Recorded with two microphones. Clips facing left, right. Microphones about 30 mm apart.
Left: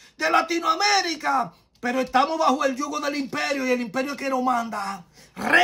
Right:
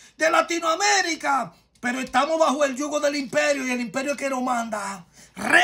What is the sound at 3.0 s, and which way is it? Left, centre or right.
Speech, right.